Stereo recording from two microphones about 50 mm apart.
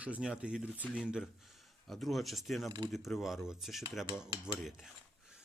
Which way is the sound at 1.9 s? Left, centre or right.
Centre.